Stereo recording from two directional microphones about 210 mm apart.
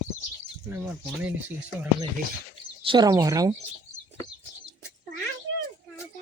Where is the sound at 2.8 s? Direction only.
20° right (ahead or behind).